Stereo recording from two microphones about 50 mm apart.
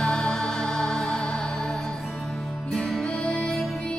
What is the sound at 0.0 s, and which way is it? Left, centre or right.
Music, centre.